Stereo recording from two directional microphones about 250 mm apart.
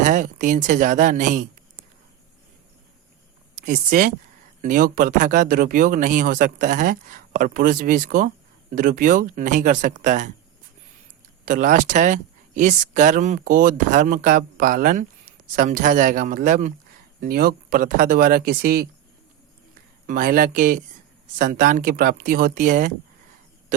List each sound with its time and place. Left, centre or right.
0.0 s speech: right
3.7 s speech: right
11.4 s speech: right
20.1 s speech: right